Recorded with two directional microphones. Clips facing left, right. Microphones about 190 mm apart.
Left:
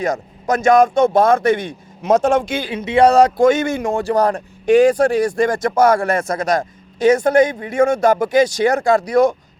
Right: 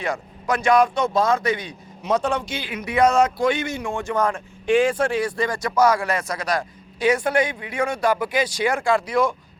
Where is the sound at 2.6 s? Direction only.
30° left (ahead or behind).